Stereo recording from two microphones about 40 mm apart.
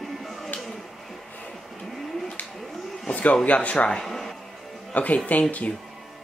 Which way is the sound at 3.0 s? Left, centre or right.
Left.